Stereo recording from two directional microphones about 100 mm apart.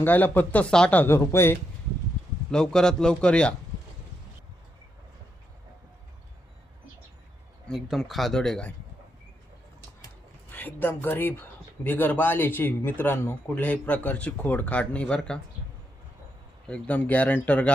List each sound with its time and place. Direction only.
0.0 s speech: 20° left (ahead or behind)
2.5 s speech: 5° left (ahead or behind)
7.7 s speech: centre (ahead or behind)
10.5 s speech: 20° left (ahead or behind)
16.6 s speech: 10° left (ahead or behind)